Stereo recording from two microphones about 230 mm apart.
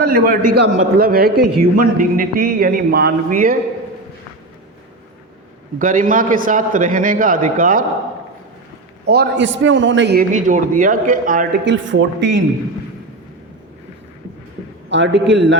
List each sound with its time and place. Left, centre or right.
0.0 s a man's voice: right
5.8 s a man's voice: right
9.0 s a man's voice: right
10.3 s a man's voice: right
11.6 s a man's voice: right
14.8 s a man's voice: right